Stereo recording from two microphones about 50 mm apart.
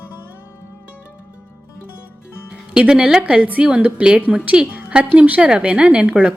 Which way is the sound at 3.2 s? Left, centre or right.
Right.